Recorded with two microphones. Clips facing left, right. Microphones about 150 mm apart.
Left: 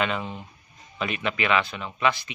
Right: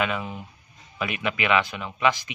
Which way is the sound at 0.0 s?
5° right (ahead or behind).